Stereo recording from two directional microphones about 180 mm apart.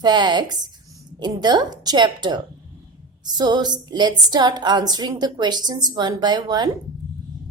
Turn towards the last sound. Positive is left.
turn(degrees=-25)  # may be behind; listen again after turning